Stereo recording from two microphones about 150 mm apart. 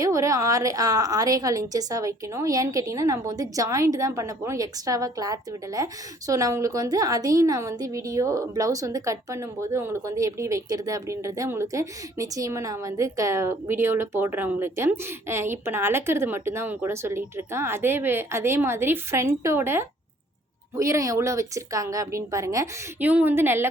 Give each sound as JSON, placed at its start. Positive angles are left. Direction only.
{"t": 0.0, "sound": "a woman's voice", "side_deg": -20}